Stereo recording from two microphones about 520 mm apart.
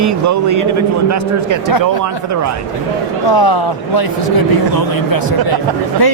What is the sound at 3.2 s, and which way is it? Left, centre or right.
Speech, left.